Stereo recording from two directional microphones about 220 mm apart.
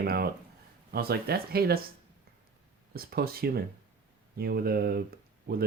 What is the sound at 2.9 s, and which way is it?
Speech, 45° right (ahead or behind).